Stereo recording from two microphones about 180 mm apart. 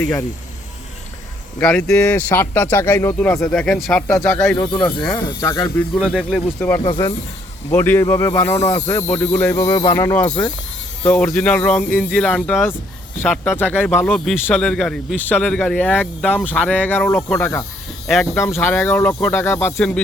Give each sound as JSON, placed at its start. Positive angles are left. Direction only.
{"t": 1.5, "sound": "speech", "side_deg": 10}
{"t": 6.0, "sound": "speech", "side_deg": -5}
{"t": 6.6, "sound": "speech", "side_deg": 10}
{"t": 18.0, "sound": "speech", "side_deg": 0}